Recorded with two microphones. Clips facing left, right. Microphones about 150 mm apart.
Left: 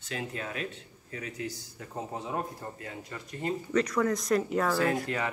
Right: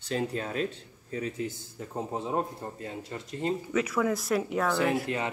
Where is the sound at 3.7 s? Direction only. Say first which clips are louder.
Left 2 dB; 5° right (ahead or behind).